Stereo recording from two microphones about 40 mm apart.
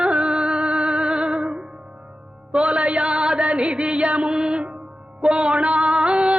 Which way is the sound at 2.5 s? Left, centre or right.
Right.